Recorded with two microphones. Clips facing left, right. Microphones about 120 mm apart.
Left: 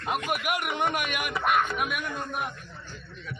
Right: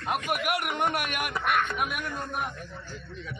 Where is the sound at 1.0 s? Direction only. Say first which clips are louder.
Left 1 dB; 45° right (ahead or behind).